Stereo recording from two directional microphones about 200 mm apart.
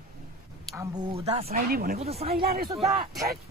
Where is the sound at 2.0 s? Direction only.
30° right (ahead or behind).